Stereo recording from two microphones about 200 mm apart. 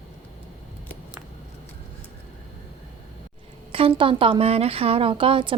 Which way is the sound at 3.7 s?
25° right (ahead or behind).